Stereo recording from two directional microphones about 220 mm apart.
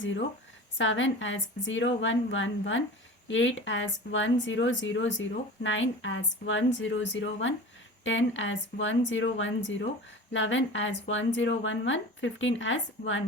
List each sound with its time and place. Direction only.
0.0 s speech: 55° left (ahead or behind)